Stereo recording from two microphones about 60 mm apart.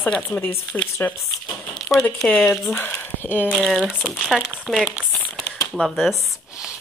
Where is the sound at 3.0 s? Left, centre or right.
Left.